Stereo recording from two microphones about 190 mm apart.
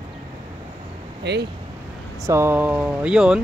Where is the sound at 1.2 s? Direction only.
60° right (ahead or behind).